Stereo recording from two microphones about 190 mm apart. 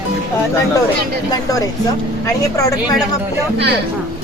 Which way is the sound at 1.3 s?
20° left (ahead or behind).